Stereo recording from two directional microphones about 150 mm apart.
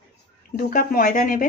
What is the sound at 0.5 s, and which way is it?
Speech, 70° left (ahead or behind).